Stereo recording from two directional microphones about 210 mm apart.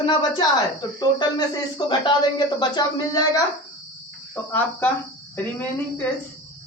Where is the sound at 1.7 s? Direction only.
20° left (ahead or behind).